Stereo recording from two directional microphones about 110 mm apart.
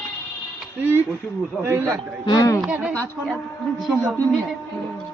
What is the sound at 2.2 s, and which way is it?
Speech, 35° left (ahead or behind).